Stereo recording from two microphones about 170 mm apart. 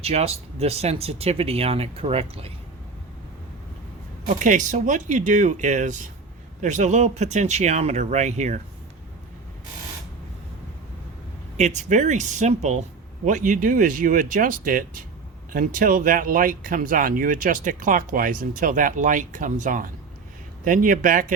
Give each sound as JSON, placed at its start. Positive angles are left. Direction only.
{"t": 0.0, "sound": "speech", "side_deg": -35}
{"t": 4.3, "sound": "speech", "side_deg": -50}
{"t": 11.5, "sound": "speech", "side_deg": -45}